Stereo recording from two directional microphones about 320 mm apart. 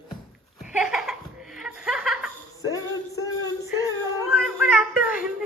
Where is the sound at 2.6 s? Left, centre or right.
Centre.